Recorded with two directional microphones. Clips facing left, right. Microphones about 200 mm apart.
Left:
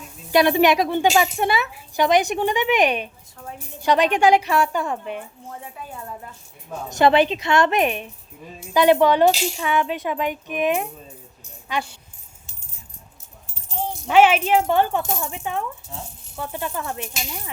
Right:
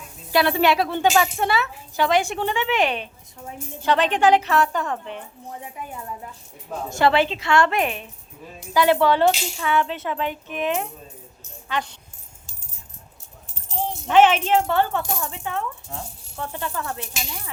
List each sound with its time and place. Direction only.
0.3 s speech: 20° left (ahead or behind)
6.9 s speech: 20° left (ahead or behind)
14.1 s speech: 10° left (ahead or behind)